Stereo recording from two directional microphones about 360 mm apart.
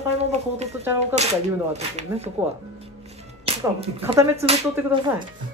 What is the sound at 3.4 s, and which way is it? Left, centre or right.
Speech, centre.